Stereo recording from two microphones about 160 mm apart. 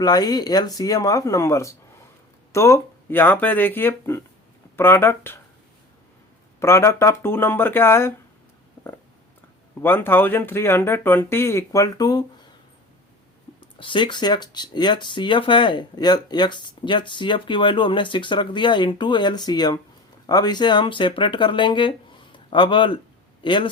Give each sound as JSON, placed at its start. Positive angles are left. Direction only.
{"t": 0.0, "sound": "speech", "side_deg": 25}
{"t": 6.6, "sound": "speech", "side_deg": 15}
{"t": 9.8, "sound": "speech", "side_deg": 15}
{"t": 13.6, "sound": "speech", "side_deg": 30}